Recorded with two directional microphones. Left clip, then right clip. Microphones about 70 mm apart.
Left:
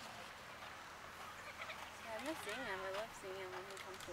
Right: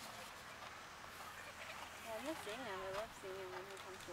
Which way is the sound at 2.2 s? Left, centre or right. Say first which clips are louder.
Left 3 dB; left.